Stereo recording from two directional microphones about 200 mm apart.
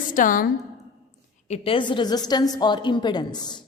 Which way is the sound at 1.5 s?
25° left (ahead or behind).